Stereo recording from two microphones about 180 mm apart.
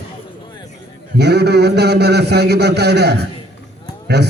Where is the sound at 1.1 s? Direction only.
65° right (ahead or behind).